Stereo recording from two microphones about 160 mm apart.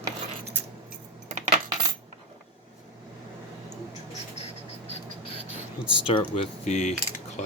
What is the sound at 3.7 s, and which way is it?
Mouse, 45° left (ahead or behind).